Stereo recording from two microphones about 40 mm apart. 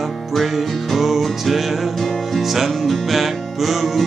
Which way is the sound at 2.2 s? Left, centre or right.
Centre.